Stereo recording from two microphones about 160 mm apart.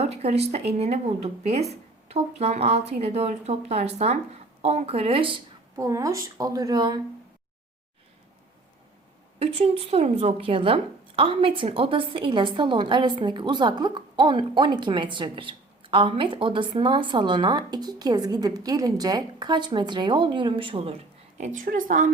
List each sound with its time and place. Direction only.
0.0 s speech: 40° right (ahead or behind)
5.7 s a woman's voice: 20° right (ahead or behind)
9.4 s a woman's voice: 40° right (ahead or behind)
21.3 s a woman's voice: 50° right (ahead or behind)